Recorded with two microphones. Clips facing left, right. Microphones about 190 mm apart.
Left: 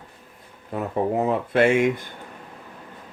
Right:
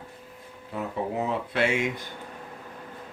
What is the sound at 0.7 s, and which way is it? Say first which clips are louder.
Speech: left 6 dB; 50° left (ahead or behind).